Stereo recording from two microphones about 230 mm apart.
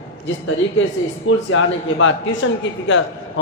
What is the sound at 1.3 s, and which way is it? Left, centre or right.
A woman's voice, left.